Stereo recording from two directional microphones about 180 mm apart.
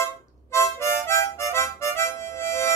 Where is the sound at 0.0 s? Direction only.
15° left (ahead or behind).